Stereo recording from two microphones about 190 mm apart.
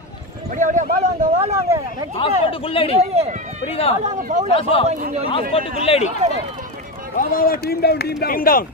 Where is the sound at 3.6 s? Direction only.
30° left (ahead or behind).